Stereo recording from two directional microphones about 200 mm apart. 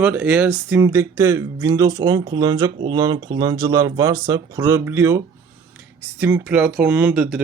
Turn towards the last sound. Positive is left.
turn(degrees=-5)  # may be behind; listen again after turning